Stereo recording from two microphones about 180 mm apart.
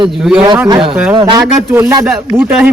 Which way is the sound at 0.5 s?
20° right (ahead or behind).